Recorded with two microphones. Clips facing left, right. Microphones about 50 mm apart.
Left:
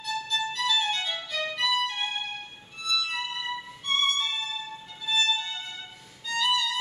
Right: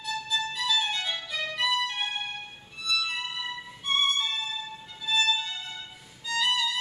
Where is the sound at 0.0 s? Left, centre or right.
Centre.